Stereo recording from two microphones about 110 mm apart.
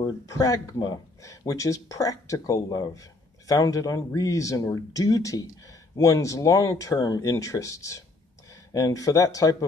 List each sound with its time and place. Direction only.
0.3 s speech: 30° left (ahead or behind)